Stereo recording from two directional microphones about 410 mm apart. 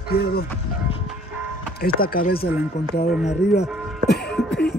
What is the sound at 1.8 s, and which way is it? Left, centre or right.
Speech, left.